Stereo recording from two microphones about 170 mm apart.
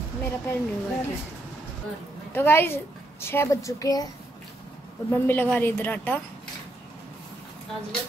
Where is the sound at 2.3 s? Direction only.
15° left (ahead or behind).